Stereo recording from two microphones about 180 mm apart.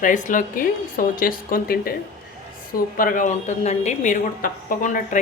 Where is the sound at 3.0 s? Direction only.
50° left (ahead or behind).